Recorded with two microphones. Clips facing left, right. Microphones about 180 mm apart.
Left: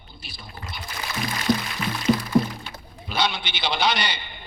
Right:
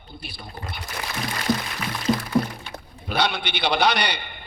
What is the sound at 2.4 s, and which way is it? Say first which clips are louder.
Thunk: left 2 dB; 5° left (ahead or behind).